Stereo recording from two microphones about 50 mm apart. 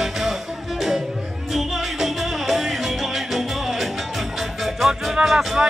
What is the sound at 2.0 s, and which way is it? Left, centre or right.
Music, centre.